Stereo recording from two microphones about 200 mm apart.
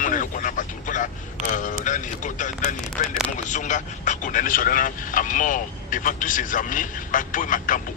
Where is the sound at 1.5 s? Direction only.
40° left (ahead or behind).